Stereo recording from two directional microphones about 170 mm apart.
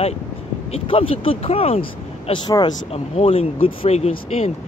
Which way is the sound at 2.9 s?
35° left (ahead or behind).